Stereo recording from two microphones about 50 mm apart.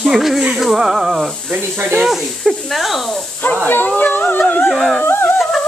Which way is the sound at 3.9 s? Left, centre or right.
Left.